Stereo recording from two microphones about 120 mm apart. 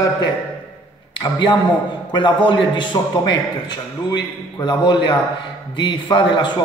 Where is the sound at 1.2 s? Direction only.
35° left (ahead or behind).